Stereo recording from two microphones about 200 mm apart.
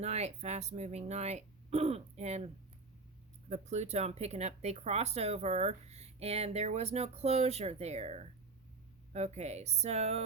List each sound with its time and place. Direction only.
0.0 s speech: 35° right (ahead or behind)
3.5 s speech: 35° right (ahead or behind)